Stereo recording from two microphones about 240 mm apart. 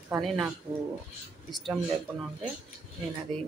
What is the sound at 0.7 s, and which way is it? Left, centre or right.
Speech, centre.